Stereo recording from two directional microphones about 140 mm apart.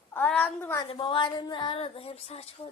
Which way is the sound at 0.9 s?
40° left (ahead or behind).